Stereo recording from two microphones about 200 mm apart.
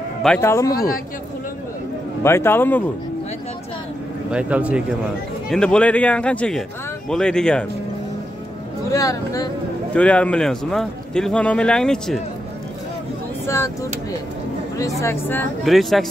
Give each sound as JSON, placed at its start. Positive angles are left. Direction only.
{"t": 0.4, "sound": "speech", "side_deg": 15}
{"t": 2.2, "sound": "speech", "side_deg": 10}
{"t": 4.3, "sound": "speech", "side_deg": -5}
{"t": 5.5, "sound": "a man's voice", "side_deg": 5}
{"t": 8.9, "sound": "speech", "side_deg": 15}
{"t": 9.9, "sound": "a man's voice", "side_deg": 5}
{"t": 13.5, "sound": "speech", "side_deg": 15}
{"t": 15.0, "sound": "speech", "side_deg": 10}
{"t": 15.6, "sound": "a man's voice", "side_deg": 0}